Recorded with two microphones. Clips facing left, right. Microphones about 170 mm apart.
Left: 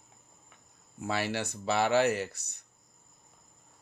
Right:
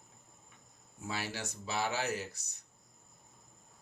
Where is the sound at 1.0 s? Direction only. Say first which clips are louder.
Left 8 dB; 70° left (ahead or behind).